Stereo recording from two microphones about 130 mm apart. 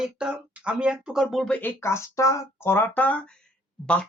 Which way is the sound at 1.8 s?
20° left (ahead or behind).